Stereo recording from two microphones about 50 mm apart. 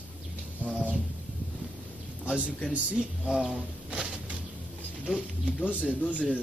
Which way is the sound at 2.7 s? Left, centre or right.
Right.